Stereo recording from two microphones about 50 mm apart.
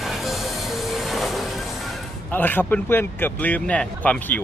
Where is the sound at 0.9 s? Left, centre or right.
Centre.